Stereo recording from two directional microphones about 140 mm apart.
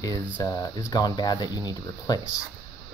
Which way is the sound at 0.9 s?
30° left (ahead or behind).